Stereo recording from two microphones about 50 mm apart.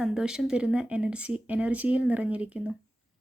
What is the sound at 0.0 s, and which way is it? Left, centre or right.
Speech, centre.